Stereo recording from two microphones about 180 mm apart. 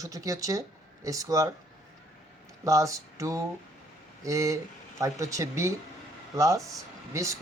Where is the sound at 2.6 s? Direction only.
20° right (ahead or behind).